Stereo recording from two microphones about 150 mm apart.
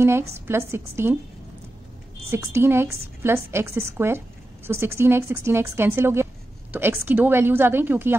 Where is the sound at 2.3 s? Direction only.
15° right (ahead or behind).